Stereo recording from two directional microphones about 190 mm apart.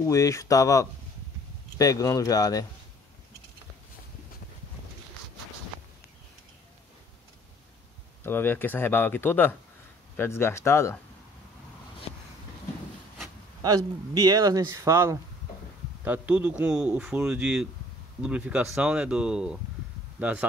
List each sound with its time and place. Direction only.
0.0 s speech: 15° left (ahead or behind)
8.2 s speech: 10° left (ahead or behind)
13.6 s a man's voice: 20° right (ahead or behind)